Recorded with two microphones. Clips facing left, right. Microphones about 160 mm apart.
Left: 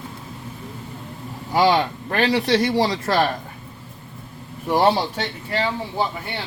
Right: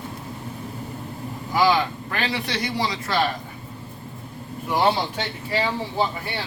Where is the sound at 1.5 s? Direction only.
35° left (ahead or behind).